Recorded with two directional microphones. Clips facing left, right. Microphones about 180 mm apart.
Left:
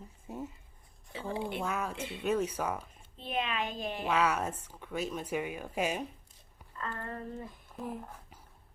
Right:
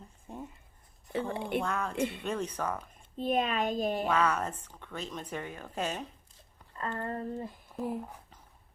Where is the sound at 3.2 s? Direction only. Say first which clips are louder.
Right 5 dB; 45° right (ahead or behind).